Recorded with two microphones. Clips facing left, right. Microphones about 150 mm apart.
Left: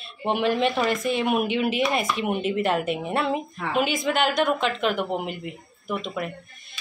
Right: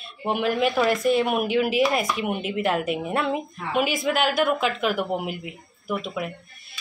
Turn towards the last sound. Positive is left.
turn(degrees=-5)  # may be behind; listen again after turning